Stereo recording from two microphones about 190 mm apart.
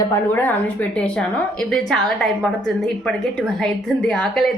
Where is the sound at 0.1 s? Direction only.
10° left (ahead or behind).